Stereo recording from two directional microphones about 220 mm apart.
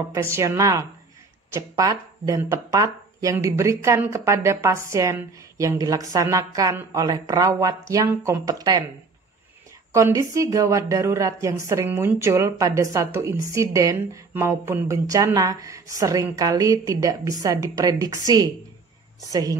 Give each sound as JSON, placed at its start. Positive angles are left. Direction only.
{"t": 0.1, "sound": "speech", "side_deg": -10}
{"t": 9.9, "sound": "speech", "side_deg": -15}